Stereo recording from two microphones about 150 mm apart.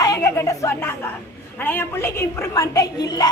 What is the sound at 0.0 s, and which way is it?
Speech, 20° left (ahead or behind).